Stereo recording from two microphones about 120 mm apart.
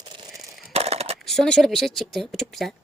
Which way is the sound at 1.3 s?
5° left (ahead or behind).